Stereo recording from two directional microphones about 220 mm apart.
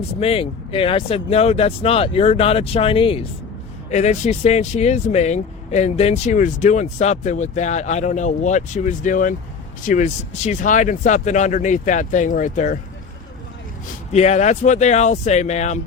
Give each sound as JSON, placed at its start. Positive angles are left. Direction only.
{"t": 0.2, "sound": "speech", "side_deg": 25}
{"t": 14.1, "sound": "speech", "side_deg": 30}